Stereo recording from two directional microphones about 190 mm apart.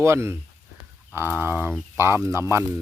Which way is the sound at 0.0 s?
15° right (ahead or behind).